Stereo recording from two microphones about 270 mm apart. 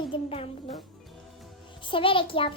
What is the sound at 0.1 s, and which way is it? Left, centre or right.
Music, left.